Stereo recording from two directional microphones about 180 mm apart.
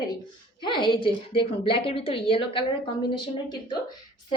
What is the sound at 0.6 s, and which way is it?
A woman's voice, 25° left (ahead or behind).